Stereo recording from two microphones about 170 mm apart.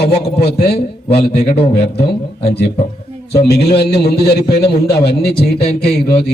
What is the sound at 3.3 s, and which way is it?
A man's voice, 70° left (ahead or behind).